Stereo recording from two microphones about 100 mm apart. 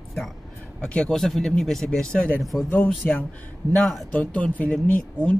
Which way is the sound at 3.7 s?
5° left (ahead or behind).